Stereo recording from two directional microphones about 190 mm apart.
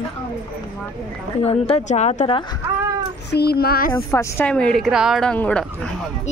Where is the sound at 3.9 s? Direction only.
15° left (ahead or behind).